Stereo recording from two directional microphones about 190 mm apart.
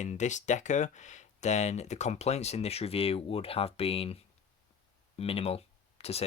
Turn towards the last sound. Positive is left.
turn(degrees=30)  # may be behind; listen again after turning